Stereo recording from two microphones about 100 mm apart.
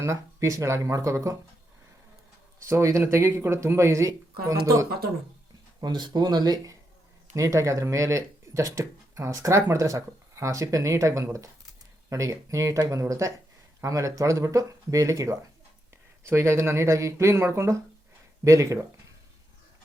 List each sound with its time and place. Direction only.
0.0 s speech: 30° right (ahead or behind)
2.6 s speech: 30° right (ahead or behind)
5.8 s speech: 45° right (ahead or behind)
7.3 s speech: 30° right (ahead or behind)